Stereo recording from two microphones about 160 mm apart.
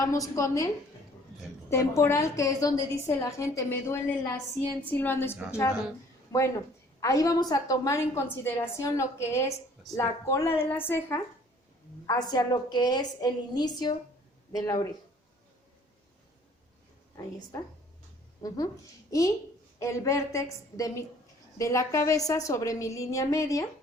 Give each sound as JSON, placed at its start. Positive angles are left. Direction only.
{"t": 0.0, "sound": "a woman's voice", "side_deg": 20}
{"t": 1.7, "sound": "a woman's voice", "side_deg": 15}
{"t": 12.0, "sound": "a woman's voice", "side_deg": 25}
{"t": 18.4, "sound": "a woman's voice", "side_deg": 25}